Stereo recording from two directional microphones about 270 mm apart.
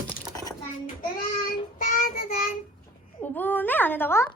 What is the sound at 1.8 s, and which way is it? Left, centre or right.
Child singing, left.